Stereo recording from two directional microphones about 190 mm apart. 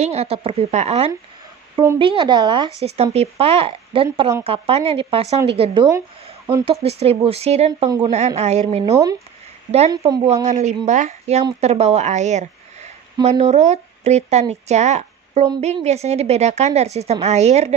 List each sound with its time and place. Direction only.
0.0 s a woman's voice: 35° right (ahead or behind)
5.6 s speech: 20° right (ahead or behind)
6.6 s a woman's voice: 30° right (ahead or behind)
10.2 s a woman's voice: 35° right (ahead or behind)